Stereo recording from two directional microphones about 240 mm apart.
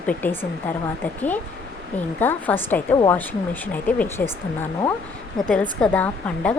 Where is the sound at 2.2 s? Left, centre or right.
Centre.